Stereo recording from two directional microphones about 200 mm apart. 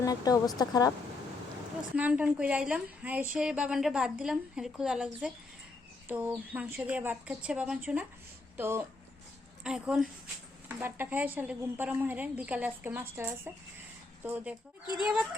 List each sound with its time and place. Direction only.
0.0 s speech: 20° left (ahead or behind)
2.0 s a woman's voice: 5° right (ahead or behind)